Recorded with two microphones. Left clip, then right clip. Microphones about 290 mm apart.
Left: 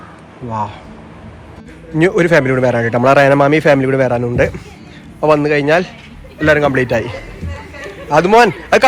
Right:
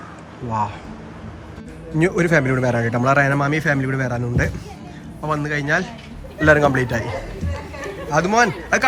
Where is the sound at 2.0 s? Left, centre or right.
Centre.